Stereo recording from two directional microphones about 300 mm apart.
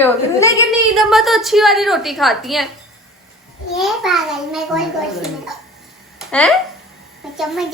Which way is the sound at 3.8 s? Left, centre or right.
Centre.